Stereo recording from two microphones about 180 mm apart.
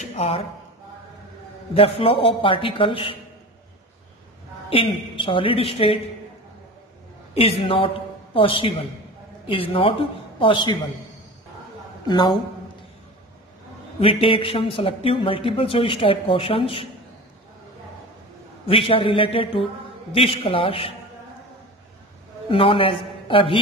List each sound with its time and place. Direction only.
0.0 s a sound: 35° left (ahead or behind)
1.7 s a man's voice: 30° left (ahead or behind)
4.6 s a woman's voice: 30° left (ahead or behind)
7.3 s a woman's voice: 30° left (ahead or behind)
12.1 s a man's voice: 20° left (ahead or behind)
13.9 s a woman's voice: 30° left (ahead or behind)
18.7 s a woman's voice: 30° left (ahead or behind)
22.5 s a man's voice: 30° left (ahead or behind)